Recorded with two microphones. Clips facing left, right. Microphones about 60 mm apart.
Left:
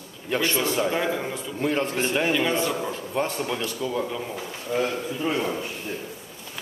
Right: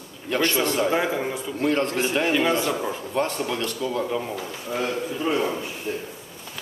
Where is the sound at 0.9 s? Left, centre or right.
Centre.